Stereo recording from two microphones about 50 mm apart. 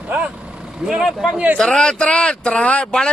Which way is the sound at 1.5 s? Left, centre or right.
Centre.